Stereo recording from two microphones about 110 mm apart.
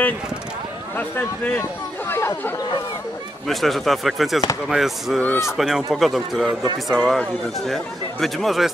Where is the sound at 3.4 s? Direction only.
Centre (ahead or behind).